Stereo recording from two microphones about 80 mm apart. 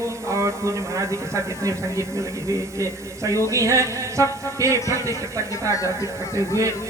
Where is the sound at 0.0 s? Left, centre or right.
Right.